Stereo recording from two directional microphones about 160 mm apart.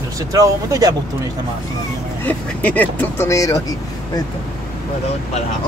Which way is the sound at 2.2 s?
10° left (ahead or behind).